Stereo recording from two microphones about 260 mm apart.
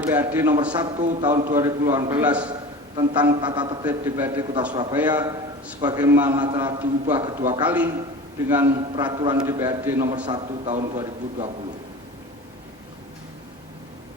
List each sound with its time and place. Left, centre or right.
0.0 s a man's voice: centre
1.5 s a man's voice: centre
2.9 s a man's voice: centre
7.6 s a man's voice: centre
8.6 s a man's voice: centre
10.2 s a man's voice: right